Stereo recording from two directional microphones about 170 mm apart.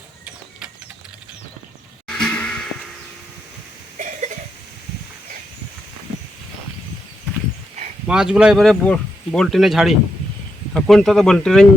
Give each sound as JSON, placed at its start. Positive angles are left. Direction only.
{"t": 2.0, "sound": "music", "side_deg": 5}
{"t": 3.9, "sound": "cough", "side_deg": -45}
{"t": 8.0, "sound": "speech", "side_deg": -5}